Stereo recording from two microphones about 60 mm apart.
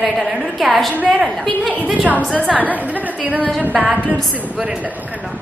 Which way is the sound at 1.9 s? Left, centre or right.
Right.